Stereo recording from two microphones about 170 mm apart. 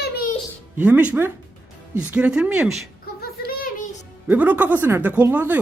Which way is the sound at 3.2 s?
60° left (ahead or behind).